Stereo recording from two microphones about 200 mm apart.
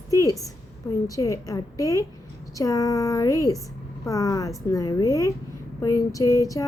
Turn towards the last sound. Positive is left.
turn(degrees=15)  # may be behind; listen again after turning